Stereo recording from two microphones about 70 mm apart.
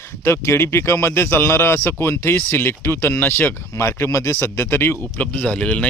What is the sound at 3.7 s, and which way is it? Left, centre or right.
Speech, left.